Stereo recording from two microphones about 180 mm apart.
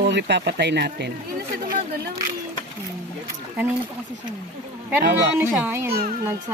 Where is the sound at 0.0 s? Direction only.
70° right (ahead or behind).